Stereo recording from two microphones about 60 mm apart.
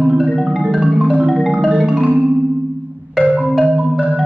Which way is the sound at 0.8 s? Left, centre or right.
Centre.